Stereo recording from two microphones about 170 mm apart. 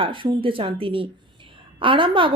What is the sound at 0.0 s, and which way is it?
A woman's voice, 30° right (ahead or behind).